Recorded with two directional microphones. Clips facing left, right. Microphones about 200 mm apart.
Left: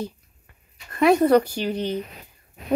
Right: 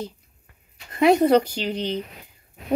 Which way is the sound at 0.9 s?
20° right (ahead or behind).